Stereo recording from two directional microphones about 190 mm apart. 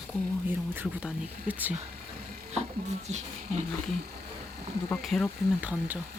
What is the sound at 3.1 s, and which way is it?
Speech, 35° right (ahead or behind).